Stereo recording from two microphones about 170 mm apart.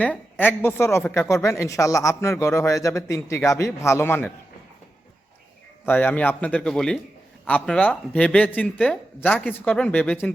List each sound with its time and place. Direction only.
0.0 s a woman's voice: 10° left (ahead or behind)
5.8 s a woman's voice: 10° left (ahead or behind)